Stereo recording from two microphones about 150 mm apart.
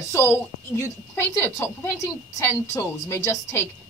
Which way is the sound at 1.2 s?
15° left (ahead or behind).